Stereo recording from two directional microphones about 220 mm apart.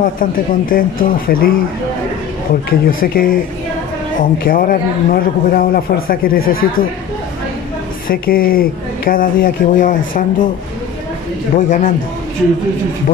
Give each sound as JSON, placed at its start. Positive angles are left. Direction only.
{"t": 0.0, "sound": "a man's voice", "side_deg": 40}
{"t": 3.0, "sound": "a man's voice", "side_deg": 40}
{"t": 8.1, "sound": "a man's voice", "side_deg": 40}
{"t": 11.5, "sound": "a man's voice", "side_deg": 35}